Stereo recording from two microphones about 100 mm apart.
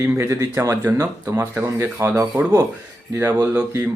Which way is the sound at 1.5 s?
20° right (ahead or behind).